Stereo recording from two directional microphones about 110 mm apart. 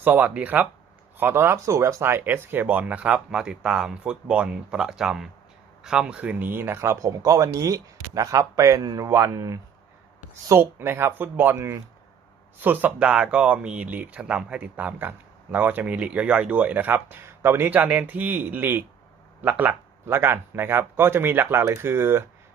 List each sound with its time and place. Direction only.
0.0 s speech: 15° right (ahead or behind)